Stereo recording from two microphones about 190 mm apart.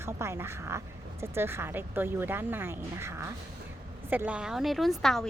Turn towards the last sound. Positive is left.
turn(degrees=0)  # may be behind; listen again after turning